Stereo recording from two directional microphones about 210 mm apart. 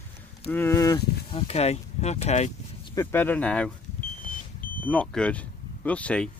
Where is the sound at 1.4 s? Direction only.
30° left (ahead or behind).